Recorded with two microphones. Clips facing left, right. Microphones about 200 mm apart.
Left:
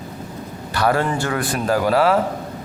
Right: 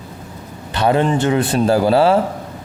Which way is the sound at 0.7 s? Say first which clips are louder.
Right 4 dB; 20° right (ahead or behind).